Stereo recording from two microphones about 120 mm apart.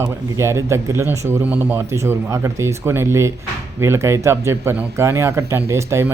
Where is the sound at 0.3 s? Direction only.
25° right (ahead or behind).